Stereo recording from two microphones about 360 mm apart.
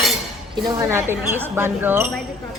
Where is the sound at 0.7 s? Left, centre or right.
Centre.